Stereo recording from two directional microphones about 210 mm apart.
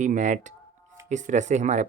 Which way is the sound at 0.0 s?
35° right (ahead or behind).